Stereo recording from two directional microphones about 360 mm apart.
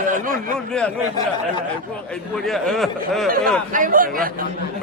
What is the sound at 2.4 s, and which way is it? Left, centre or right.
Speech, centre.